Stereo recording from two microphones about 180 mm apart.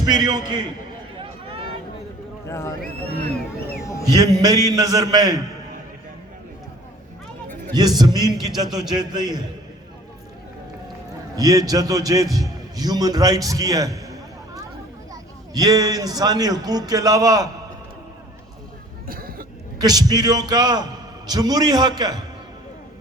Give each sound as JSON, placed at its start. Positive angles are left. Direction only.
{"t": 0.0, "sound": "a man's voice", "side_deg": -20}
{"t": 2.5, "sound": "speech", "side_deg": 15}
{"t": 3.8, "sound": "a man's voice", "side_deg": 15}
{"t": 4.1, "sound": "a man's voice", "side_deg": -20}
{"t": 7.7, "sound": "a man's voice", "side_deg": -20}
{"t": 11.3, "sound": "a man's voice", "side_deg": -20}
{"t": 19.0, "sound": "cough", "side_deg": -55}
{"t": 19.8, "sound": "a man's voice", "side_deg": -20}